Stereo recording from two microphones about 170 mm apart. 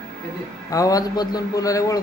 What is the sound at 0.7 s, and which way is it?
A man's voice, 20° left (ahead or behind).